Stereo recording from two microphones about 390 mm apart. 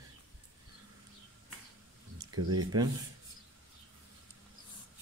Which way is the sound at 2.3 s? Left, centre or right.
Right.